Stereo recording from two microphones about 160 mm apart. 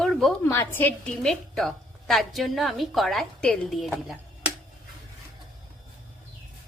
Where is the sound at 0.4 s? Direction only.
15° left (ahead or behind); by 4.5 s 5° right (ahead or behind).